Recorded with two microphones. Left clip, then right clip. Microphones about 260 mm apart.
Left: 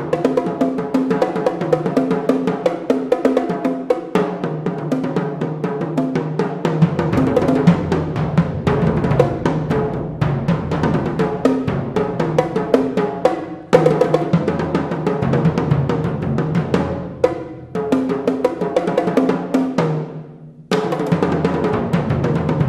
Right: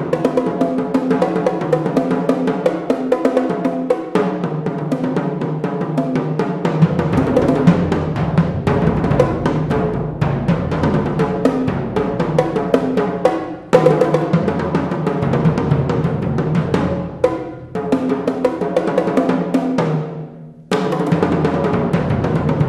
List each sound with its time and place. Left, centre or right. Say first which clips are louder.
0.2 s music: even; left
5.9 s music: right 2 dB; left
10.8 s music: right 1 dB; left
17.8 s music: even; left